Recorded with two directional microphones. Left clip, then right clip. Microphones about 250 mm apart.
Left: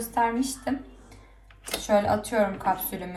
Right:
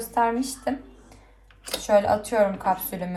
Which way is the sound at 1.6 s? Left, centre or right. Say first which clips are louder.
Right 3 dB; centre.